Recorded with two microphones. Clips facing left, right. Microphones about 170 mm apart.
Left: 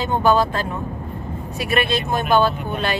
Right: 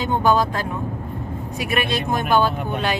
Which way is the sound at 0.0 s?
15° right (ahead or behind).